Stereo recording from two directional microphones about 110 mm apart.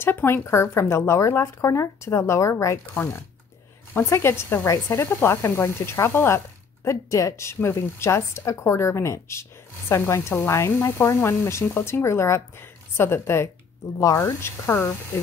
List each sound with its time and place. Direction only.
0.0 s speech: 20° left (ahead or behind)